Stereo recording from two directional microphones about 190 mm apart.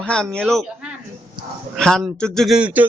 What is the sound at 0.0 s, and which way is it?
Speech, 5° left (ahead or behind).